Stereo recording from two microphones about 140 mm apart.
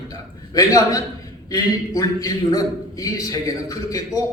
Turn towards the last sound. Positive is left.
turn(degrees=25)  # may be behind; listen again after turning